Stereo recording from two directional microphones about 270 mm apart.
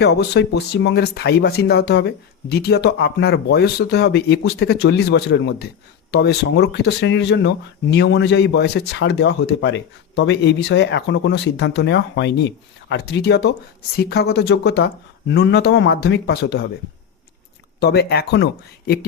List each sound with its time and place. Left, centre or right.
0.0 s speech: left
17.7 s speech: left